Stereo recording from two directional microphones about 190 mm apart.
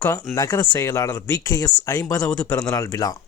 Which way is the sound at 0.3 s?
15° left (ahead or behind).